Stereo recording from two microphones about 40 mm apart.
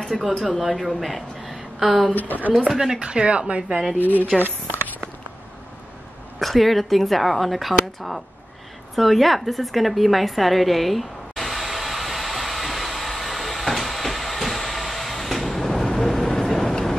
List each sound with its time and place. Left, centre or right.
0.4 s a woman's voice: centre
2.1 s speech: left
3.0 s speech: right
4.0 s speech: left
6.4 s speech: centre
8.9 s a sound: centre